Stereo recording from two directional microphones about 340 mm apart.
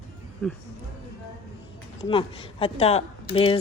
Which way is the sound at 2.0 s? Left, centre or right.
Centre.